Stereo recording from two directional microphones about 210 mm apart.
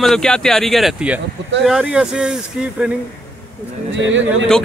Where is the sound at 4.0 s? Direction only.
65° right (ahead or behind).